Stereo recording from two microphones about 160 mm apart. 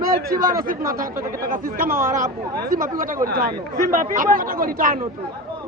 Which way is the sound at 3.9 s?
60° right (ahead or behind).